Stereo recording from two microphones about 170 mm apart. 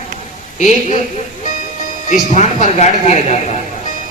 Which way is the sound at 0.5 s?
45° left (ahead or behind).